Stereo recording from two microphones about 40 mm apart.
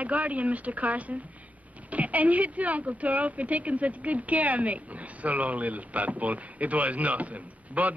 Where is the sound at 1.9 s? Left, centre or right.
Right.